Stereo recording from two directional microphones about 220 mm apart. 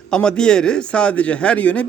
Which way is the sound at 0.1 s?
5° left (ahead or behind).